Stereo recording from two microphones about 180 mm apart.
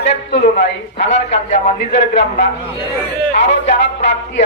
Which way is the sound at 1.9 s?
80° left.